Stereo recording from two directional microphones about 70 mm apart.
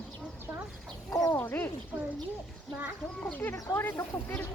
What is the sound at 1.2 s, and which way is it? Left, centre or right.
Speech, left.